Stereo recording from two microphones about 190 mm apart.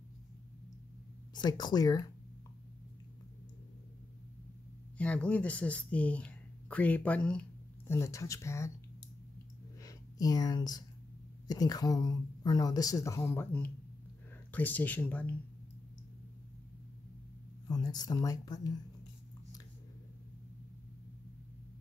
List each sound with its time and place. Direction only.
1.3 s speech: 20° left (ahead or behind)
4.9 s speech: 5° left (ahead or behind)
9.8 s a sound: 20° left (ahead or behind)
11.4 s speech: 20° left (ahead or behind)
17.6 s speech: 20° left (ahead or behind)